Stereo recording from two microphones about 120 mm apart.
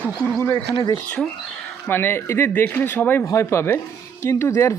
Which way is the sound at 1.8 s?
15° left (ahead or behind).